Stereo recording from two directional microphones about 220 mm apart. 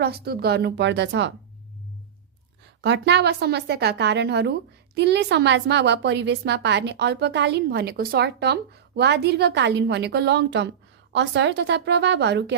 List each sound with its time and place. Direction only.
0.0 s a woman's voice: 45° right (ahead or behind)
2.8 s a woman's voice: 50° right (ahead or behind)